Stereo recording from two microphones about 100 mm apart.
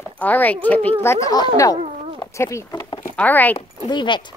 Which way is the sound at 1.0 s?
25° left (ahead or behind).